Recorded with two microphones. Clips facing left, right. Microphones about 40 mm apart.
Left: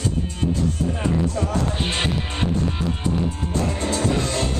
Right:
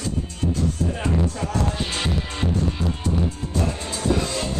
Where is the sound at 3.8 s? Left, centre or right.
Left.